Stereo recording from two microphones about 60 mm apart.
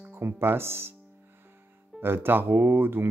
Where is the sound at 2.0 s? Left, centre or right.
Right.